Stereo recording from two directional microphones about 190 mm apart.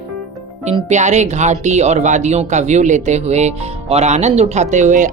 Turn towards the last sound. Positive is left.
turn(degrees=-40)  # may be behind; listen again after turning